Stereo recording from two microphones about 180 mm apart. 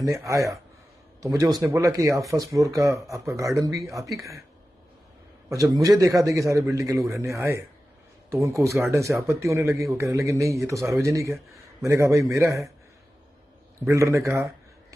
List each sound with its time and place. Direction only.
0.0 s a man's voice: 15° right (ahead or behind)
5.5 s a man's voice: 20° right (ahead or behind)
13.8 s a man's voice: 15° right (ahead or behind)